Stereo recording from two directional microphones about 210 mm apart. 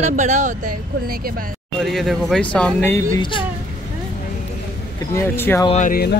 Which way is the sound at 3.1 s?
25° left (ahead or behind).